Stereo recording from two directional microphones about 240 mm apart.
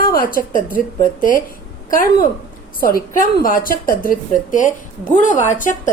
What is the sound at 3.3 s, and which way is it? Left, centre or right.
A woman's voice, left.